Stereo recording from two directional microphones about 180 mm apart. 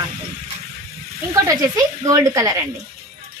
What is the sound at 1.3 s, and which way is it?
A woman's voice, 15° right (ahead or behind).